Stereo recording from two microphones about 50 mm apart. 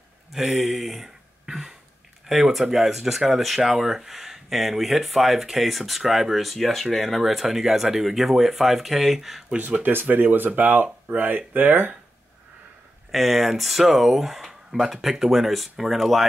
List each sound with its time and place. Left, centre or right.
0.3 s a sound: centre
2.2 s speech: centre
9.8 s speech: right
13.1 s speech: centre